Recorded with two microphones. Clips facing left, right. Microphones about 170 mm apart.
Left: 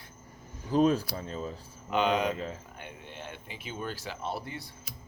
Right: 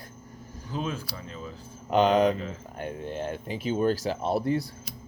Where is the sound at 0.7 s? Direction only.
40° left (ahead or behind).